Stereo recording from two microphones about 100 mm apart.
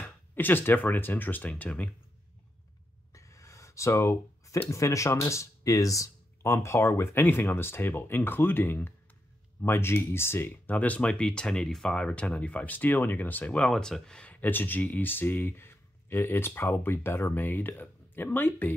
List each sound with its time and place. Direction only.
0.0 s speech: 20° left (ahead or behind)
3.1 s a sound: 30° left (ahead or behind)
4.6 s speech: 30° left (ahead or behind)